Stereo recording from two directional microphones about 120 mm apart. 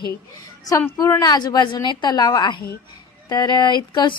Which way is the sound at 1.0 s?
30° left (ahead or behind).